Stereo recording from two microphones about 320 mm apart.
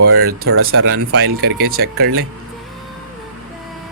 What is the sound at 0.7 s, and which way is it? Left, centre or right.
Speech, right.